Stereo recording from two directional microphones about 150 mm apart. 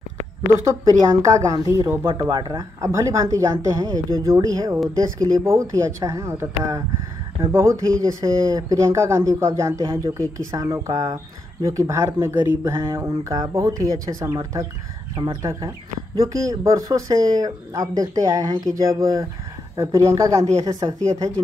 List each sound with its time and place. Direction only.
1.5 s speech: 25° right (ahead or behind)